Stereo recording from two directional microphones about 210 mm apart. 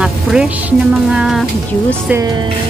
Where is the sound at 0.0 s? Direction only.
5° right (ahead or behind).